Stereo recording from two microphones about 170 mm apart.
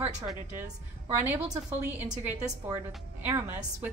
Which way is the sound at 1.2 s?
10° right (ahead or behind).